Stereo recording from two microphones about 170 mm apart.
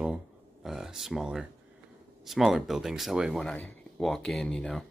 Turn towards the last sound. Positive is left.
turn(degrees=5)  # may be behind; listen again after turning